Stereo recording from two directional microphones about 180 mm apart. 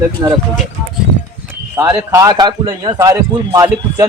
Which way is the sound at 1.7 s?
10° right (ahead or behind).